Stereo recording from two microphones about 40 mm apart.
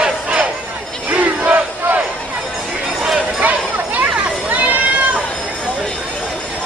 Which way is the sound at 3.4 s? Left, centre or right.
Right.